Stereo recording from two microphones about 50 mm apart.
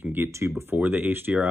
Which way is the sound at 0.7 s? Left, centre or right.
Right.